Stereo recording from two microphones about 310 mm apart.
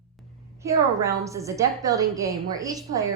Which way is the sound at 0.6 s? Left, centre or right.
Centre.